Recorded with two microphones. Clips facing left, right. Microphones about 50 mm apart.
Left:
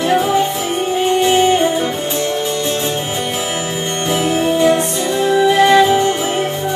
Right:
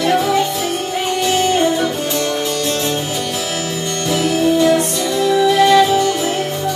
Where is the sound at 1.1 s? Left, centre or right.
Left.